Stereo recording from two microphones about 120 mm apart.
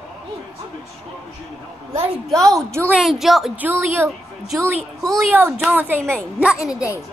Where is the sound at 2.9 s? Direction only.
5° right (ahead or behind).